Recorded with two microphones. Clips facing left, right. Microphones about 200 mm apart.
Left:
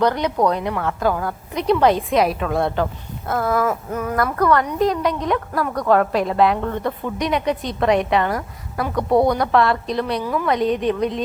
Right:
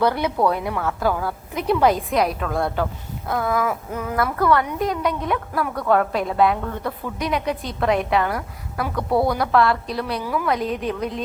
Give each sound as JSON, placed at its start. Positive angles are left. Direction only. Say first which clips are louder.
{"t": 0.0, "sound": "a woman's voice", "louder": "left 1 dB", "side_deg": -10}
{"t": 9.0, "sound": "a woman's voice", "louder": "left 4 dB", "side_deg": 20}
{"t": 9.3, "sound": "a woman's voice", "louder": "left 1 dB", "side_deg": 0}